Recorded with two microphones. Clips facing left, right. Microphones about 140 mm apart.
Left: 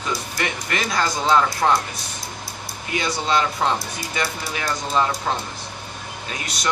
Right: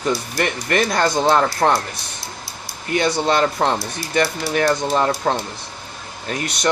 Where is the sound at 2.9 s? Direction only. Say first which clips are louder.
Right 4 dB; 55° right (ahead or behind).